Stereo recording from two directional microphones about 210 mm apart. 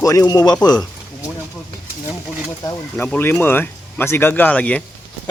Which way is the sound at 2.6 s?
10° left (ahead or behind).